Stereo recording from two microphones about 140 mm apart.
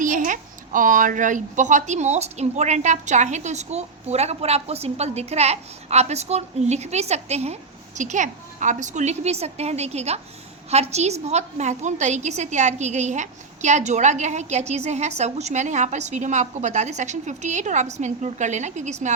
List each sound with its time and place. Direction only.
0.0 s a woman's voice: 65° right (ahead or behind)